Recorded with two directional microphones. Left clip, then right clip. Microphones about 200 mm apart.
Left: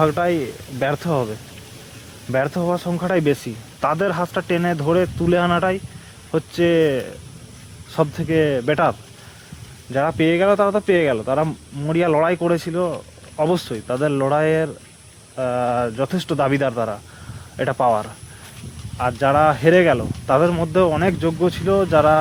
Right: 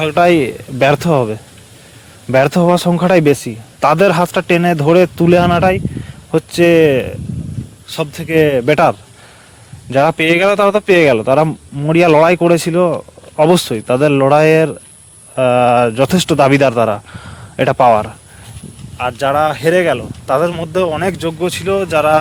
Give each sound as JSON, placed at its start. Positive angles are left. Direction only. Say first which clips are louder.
{"t": 0.0, "sound": "a man's voice", "louder": "right 8 dB", "side_deg": -45}
{"t": 9.9, "sound": "a man's voice", "louder": "right 7 dB", "side_deg": -40}